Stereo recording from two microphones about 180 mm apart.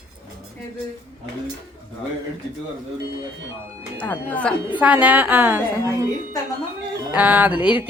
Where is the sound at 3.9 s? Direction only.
10° left (ahead or behind).